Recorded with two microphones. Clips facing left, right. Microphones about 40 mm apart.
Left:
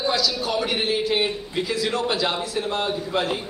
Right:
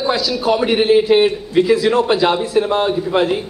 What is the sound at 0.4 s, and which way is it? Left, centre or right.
A man's voice, right.